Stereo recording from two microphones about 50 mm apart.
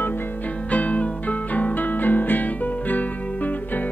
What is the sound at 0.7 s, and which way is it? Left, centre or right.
Music, left.